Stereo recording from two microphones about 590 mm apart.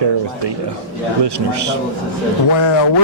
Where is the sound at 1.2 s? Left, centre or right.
Right.